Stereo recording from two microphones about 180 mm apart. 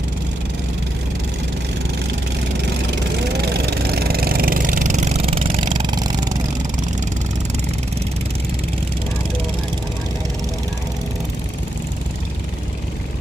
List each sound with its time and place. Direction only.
3.4 s vehicle: 60° right (ahead or behind); by 6.3 s 20° right (ahead or behind)